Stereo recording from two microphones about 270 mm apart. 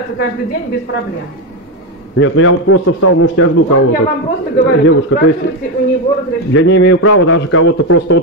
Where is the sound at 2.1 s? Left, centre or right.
Left.